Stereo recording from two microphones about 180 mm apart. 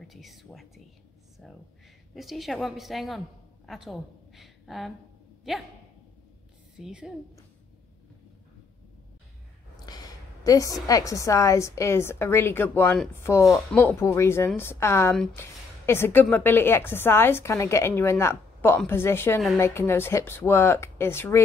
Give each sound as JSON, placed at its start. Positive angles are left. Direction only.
{"t": 0.0, "sound": "a woman's voice", "side_deg": 0}
{"t": 2.1, "sound": "a woman's voice", "side_deg": 0}
{"t": 6.8, "sound": "a woman's voice", "side_deg": -5}
{"t": 9.8, "sound": "a woman's voice", "side_deg": 20}